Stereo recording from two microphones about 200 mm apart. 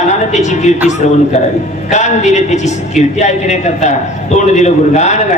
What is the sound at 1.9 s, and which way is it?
A man's voice, 35° left (ahead or behind).